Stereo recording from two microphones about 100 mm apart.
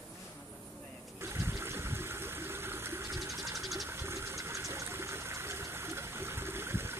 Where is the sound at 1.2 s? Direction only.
25° right (ahead or behind).